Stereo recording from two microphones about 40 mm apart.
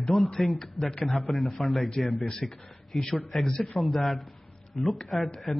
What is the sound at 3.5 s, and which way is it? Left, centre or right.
Speech, left.